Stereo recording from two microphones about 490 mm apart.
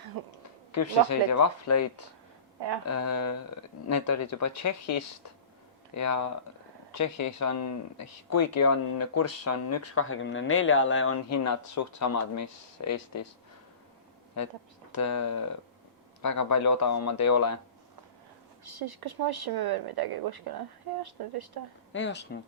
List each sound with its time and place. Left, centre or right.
0.1 s a woman's voice: right
0.7 s speech: left
2.8 s speech: left
14.9 s speech: left
18.6 s a woman's voice: right
21.9 s speech: left